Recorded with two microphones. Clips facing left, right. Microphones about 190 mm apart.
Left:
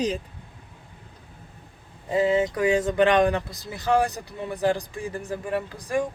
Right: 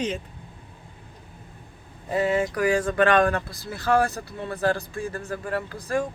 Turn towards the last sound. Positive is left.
turn(degrees=15)  # may be behind; listen again after turning